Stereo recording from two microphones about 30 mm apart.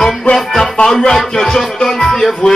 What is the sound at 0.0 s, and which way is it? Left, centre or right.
Music, centre.